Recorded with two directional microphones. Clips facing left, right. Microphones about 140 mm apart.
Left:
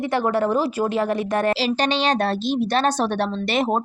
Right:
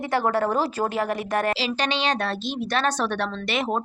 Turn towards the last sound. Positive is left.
turn(degrees=35)  # may be behind; listen again after turning